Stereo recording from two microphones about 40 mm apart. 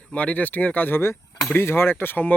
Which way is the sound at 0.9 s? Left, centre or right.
Left.